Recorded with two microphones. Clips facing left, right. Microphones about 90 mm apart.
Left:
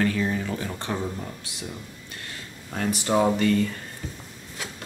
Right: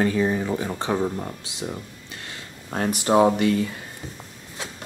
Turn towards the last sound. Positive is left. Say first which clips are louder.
# right 1 dB
turn(degrees=-10)  # may be behind; listen again after turning